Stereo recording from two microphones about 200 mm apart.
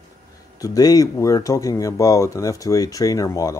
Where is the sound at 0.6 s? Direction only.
20° left (ahead or behind).